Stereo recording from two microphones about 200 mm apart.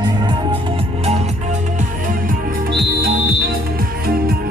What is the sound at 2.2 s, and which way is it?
Music, 45° right (ahead or behind).